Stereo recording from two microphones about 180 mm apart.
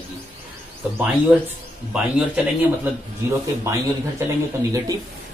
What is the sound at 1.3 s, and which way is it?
Speech, 5° right (ahead or behind).